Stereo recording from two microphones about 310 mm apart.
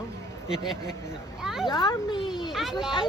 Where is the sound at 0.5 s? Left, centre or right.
Centre.